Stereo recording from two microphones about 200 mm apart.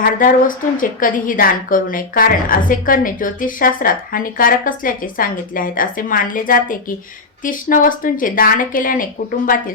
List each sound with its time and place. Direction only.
0.0 s a woman's voice: 45° left (ahead or behind)